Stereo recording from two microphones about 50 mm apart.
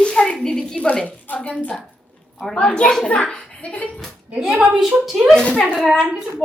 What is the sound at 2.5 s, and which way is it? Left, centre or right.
A woman's voice, centre.